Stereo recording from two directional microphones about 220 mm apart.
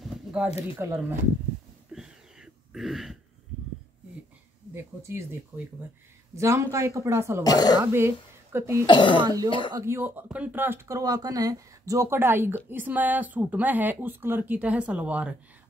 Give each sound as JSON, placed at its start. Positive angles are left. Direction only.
{"t": 0.0, "sound": "a sound", "side_deg": -5}
{"t": 0.7, "sound": "speech", "side_deg": -10}
{"t": 1.9, "sound": "a sound", "side_deg": 0}
{"t": 4.7, "sound": "speech", "side_deg": -10}
{"t": 7.4, "sound": "speech", "side_deg": 15}
{"t": 7.8, "sound": "speech", "side_deg": -10}
{"t": 8.8, "sound": "speech", "side_deg": 20}
{"t": 9.7, "sound": "speech", "side_deg": -15}